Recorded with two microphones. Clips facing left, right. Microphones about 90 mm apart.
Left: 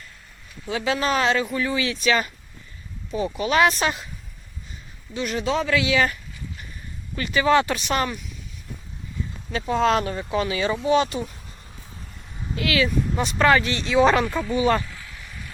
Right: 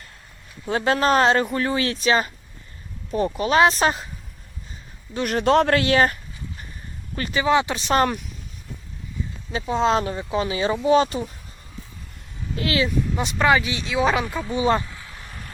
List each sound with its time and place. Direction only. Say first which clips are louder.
0.7 s speech: right 4 dB; 45° right (ahead or behind)
3.1 s speech: right 2 dB; 45° right (ahead or behind)
5.1 s speech: right 6 dB; 55° right (ahead or behind)
7.3 s speech: left 1 dB; 15° right (ahead or behind)
7.8 s speech: right 4 dB; 35° right (ahead or behind)
9.5 s speech: even; 20° right (ahead or behind)
12.5 s speech: even; 30° right (ahead or behind)
13.1 s speech: left 1 dB; 15° right (ahead or behind)
14.4 s a sound: even; 25° right (ahead or behind); by 15.5 s 45° right (ahead or behind)